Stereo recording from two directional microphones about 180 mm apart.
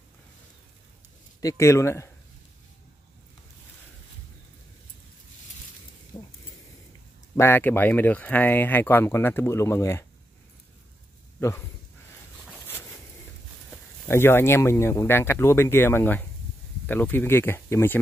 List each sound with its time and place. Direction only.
1.4 s speech: 15° left (ahead or behind)
6.1 s a sound: 25° left (ahead or behind)
7.3 s speech: 10° left (ahead or behind)
11.3 s speech: 10° left (ahead or behind)
13.7 s speech: 15° left (ahead or behind)